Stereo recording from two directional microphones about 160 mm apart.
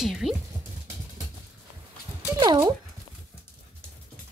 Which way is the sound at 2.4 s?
25° right (ahead or behind).